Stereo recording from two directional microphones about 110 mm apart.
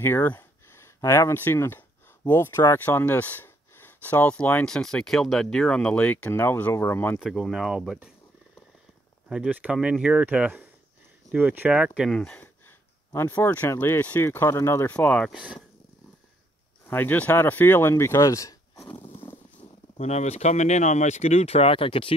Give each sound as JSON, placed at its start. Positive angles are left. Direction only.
{"t": 0.0, "sound": "speech", "side_deg": 20}
{"t": 7.2, "sound": "speech", "side_deg": 0}
{"t": 9.5, "sound": "speech", "side_deg": -15}
{"t": 12.2, "sound": "a sound", "side_deg": 10}
{"t": 13.1, "sound": "speech", "side_deg": 25}
{"t": 14.9, "sound": "speech", "side_deg": 5}
{"t": 16.8, "sound": "speech", "side_deg": 15}
{"t": 19.2, "sound": "a sound", "side_deg": 20}
{"t": 19.6, "sound": "speech", "side_deg": 85}